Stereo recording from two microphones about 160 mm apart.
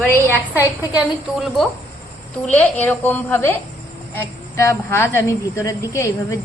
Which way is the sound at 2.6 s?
10° left (ahead or behind).